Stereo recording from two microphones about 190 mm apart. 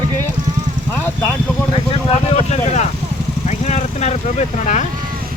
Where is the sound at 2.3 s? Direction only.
35° left (ahead or behind).